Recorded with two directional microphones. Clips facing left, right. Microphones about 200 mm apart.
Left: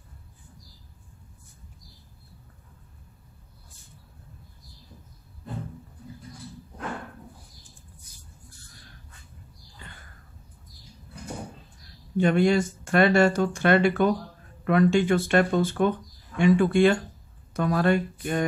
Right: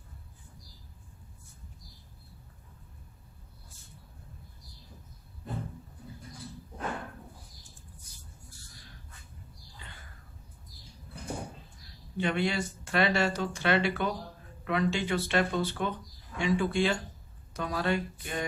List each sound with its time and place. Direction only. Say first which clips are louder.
12.2 s speech: left 9 dB; 45° left (ahead or behind)